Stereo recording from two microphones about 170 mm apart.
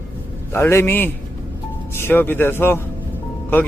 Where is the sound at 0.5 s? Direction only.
15° left (ahead or behind).